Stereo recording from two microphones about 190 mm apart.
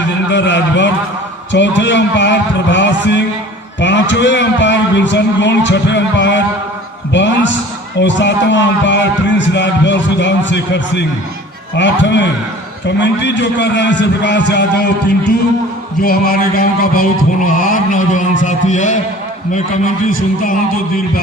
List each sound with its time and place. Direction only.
0.3 s a man's voice: 70° left (ahead or behind)
16.0 s speech: 55° left (ahead or behind)
20.1 s speech: 45° left (ahead or behind)